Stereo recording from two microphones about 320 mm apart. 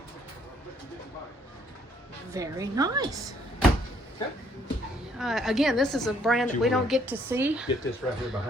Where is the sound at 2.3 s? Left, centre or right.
Centre.